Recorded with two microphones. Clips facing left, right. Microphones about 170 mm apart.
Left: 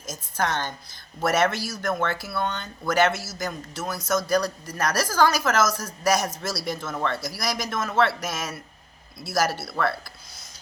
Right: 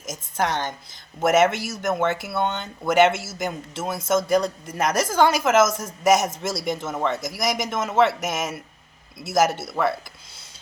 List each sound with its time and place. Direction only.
0.0 s speech: 20° right (ahead or behind)